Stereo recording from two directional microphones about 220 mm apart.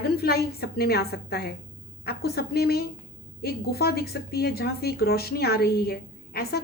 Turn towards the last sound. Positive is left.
turn(degrees=45)  # may be behind; listen again after turning